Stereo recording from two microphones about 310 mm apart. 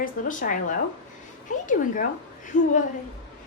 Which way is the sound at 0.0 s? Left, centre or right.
Left.